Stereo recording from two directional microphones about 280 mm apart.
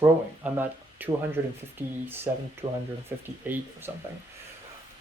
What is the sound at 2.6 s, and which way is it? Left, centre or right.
Speech, centre.